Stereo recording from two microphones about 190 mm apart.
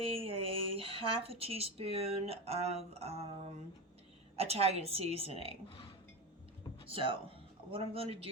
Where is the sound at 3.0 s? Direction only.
30° right (ahead or behind).